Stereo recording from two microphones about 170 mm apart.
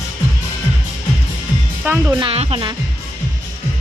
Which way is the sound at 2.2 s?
35° right (ahead or behind).